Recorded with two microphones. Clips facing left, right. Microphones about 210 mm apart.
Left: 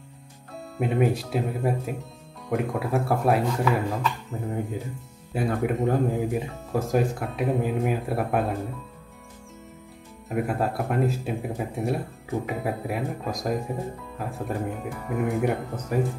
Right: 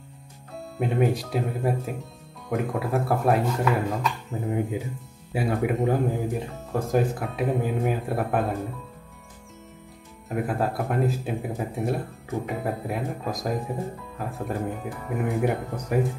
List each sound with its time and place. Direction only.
0.7 s speech: centre (ahead or behind)
10.3 s speech: centre (ahead or behind)